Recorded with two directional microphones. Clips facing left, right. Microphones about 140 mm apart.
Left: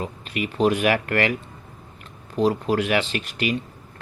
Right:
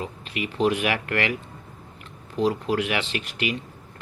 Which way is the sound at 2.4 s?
40° left (ahead or behind).